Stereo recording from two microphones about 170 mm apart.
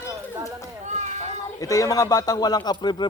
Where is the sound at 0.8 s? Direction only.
45° right (ahead or behind).